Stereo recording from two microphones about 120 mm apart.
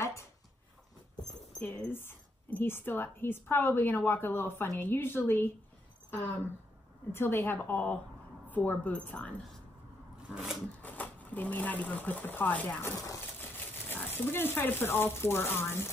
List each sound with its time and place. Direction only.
0.0 s dog: 25° left (ahead or behind)
1.6 s a woman's voice: 15° left (ahead or behind)
10.3 s a sound: 5° right (ahead or behind)
10.8 s speech: 15° left (ahead or behind)
12.9 s speech: 25° left (ahead or behind)